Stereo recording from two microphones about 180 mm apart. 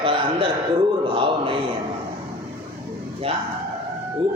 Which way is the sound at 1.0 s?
30° right (ahead or behind).